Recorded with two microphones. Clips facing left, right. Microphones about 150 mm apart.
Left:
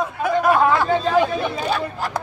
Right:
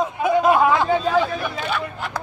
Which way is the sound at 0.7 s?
10° right (ahead or behind).